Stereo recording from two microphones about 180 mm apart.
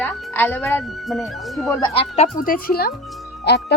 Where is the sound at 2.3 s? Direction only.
50° left (ahead or behind).